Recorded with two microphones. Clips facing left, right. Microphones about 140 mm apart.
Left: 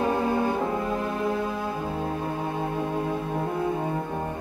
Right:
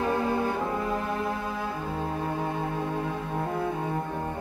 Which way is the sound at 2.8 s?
15° left (ahead or behind).